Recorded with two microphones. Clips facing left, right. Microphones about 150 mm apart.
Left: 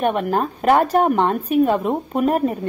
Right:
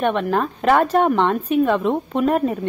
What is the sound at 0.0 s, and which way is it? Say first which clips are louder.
A woman's voice: even; 45° left (ahead or behind).